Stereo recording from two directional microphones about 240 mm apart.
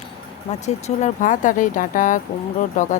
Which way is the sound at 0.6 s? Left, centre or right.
Left.